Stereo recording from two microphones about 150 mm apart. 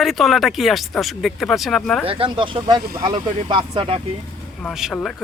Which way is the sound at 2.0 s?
35° right (ahead or behind).